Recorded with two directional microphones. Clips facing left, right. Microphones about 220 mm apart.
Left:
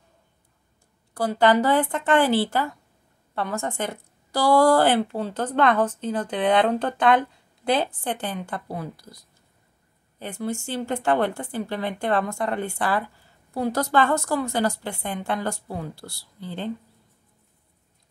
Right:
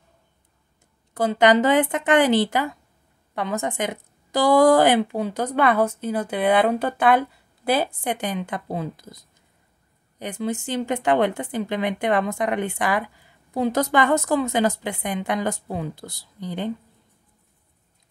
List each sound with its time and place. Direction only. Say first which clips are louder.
1.1 s a woman's voice: right 2 dB; 20° right (ahead or behind)